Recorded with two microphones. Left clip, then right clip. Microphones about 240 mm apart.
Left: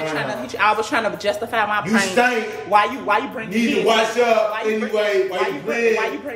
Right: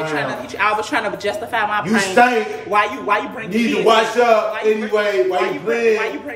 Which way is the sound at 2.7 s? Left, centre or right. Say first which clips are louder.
Even; centre.